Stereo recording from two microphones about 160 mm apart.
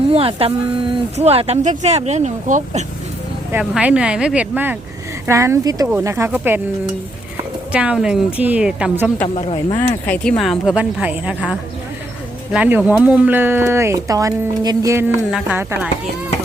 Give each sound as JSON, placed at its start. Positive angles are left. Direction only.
{"t": 0.1, "sound": "speech", "side_deg": -35}
{"t": 3.5, "sound": "speech", "side_deg": -10}
{"t": 7.7, "sound": "speech", "side_deg": -5}
{"t": 9.3, "sound": "speech", "side_deg": 40}
{"t": 10.1, "sound": "a woman's voice", "side_deg": 5}
{"t": 12.5, "sound": "speech", "side_deg": -10}
{"t": 15.3, "sound": "speech", "side_deg": -5}